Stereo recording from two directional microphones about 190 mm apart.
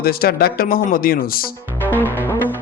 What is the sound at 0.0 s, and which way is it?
Speech, 55° left (ahead or behind).